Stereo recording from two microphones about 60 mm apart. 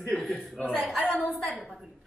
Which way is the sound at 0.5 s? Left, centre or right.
Centre.